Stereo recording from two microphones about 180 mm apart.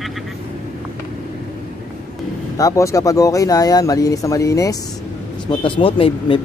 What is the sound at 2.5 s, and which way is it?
Speech, 20° left (ahead or behind).